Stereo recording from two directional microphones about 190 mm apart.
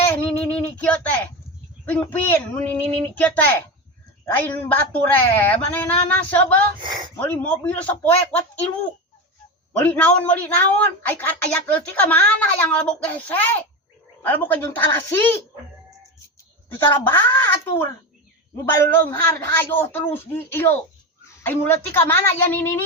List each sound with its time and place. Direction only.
0.1 s a sound: 10° left (ahead or behind)
1.9 s a man's voice: 10° left (ahead or behind)
6.8 s speech: 25° right (ahead or behind)
7.2 s a man's voice: 10° left (ahead or behind)
9.8 s a man's voice: 5° left (ahead or behind)
16.7 s a man's voice: 10° left (ahead or behind)